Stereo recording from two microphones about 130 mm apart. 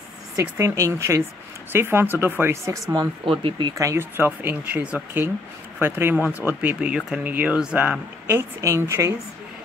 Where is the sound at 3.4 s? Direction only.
35° right (ahead or behind).